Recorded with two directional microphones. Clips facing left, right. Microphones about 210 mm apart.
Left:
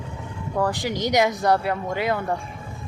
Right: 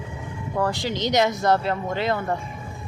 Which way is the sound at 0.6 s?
15° left (ahead or behind).